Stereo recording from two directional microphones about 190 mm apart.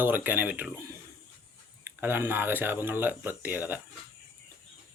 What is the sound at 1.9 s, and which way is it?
Speech, 10° right (ahead or behind).